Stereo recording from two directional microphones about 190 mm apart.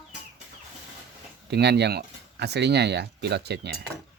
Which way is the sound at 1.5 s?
60° right (ahead or behind).